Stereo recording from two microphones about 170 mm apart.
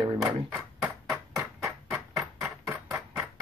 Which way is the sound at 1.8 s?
15° right (ahead or behind).